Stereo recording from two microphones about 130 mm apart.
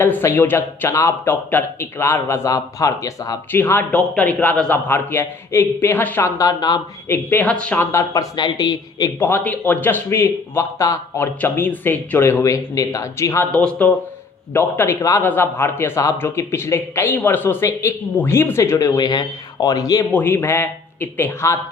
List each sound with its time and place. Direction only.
0.0 s speech: 20° left (ahead or behind)
3.5 s a man's voice: 15° left (ahead or behind); by 6.8 s 30° left (ahead or behind)
7.1 s a man's voice: 15° left (ahead or behind)
7.9 s speech: 25° left (ahead or behind)
9.1 s a man's voice: 15° left (ahead or behind)
13.5 s a man's voice: 5° left (ahead or behind); by 20.1 s 25° left (ahead or behind)
20.1 s a man's voice: 15° left (ahead or behind)